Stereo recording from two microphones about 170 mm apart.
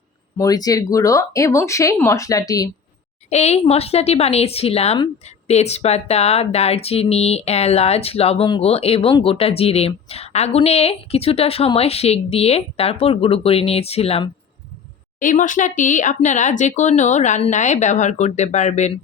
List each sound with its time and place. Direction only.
0.3 s speech: 20° left (ahead or behind)
3.2 s speech: 40° left (ahead or behind)
15.2 s speech: 50° left (ahead or behind)